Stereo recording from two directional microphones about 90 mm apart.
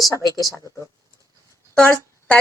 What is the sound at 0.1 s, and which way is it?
Speech, 40° left (ahead or behind).